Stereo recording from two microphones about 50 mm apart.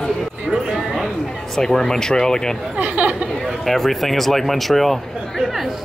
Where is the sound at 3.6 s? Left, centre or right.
Centre.